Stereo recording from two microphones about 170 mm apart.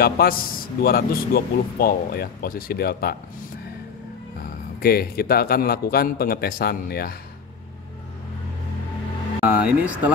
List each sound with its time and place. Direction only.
0.0 s speech: 60° left (ahead or behind)
4.8 s speech: 60° left (ahead or behind)
9.4 s speech: 10° right (ahead or behind)